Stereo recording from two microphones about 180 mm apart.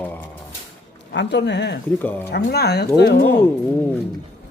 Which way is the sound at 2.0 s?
10° left (ahead or behind).